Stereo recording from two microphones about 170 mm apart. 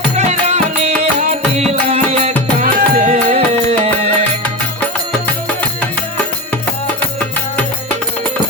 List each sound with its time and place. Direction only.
0.2 s music: 40° right (ahead or behind)
2.6 s music: 60° right (ahead or behind)
3.1 s music: 40° right (ahead or behind)